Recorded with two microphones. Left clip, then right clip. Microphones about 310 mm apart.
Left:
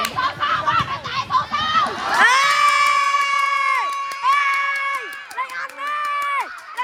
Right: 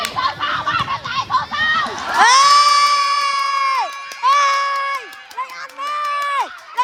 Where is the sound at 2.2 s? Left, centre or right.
Centre.